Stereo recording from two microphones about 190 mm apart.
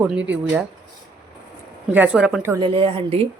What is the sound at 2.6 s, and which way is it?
Speech, 25° right (ahead or behind).